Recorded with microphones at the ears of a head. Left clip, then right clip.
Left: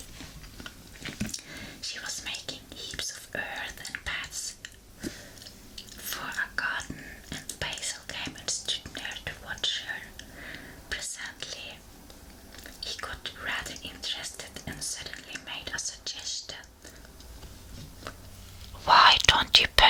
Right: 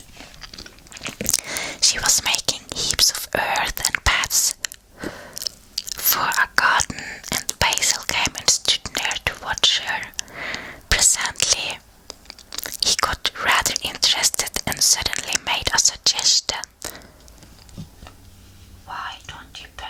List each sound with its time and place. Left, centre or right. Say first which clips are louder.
0.4 s biting: right 6 dB; right
18.9 s whispering: left 14 dB; left